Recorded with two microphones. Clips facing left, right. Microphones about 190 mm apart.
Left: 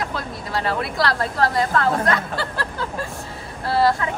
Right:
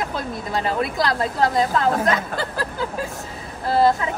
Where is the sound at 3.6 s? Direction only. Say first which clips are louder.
Right 1 dB; 20° right (ahead or behind).